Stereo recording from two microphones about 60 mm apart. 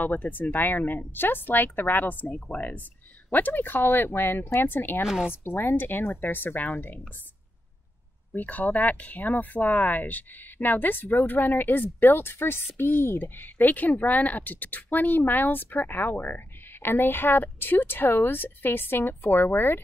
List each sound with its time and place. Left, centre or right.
0.0 s a woman's voice: left
5.0 s speech: centre
5.3 s a woman's voice: left
8.4 s a woman's voice: left